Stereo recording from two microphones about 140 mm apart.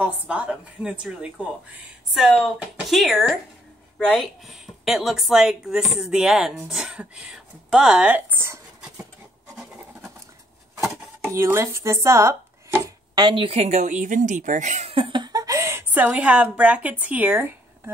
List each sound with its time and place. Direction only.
0.0 s a woman's voice: 10° right (ahead or behind)
9.6 s scratch: 5° right (ahead or behind)
10.8 s speech: 20° right (ahead or behind)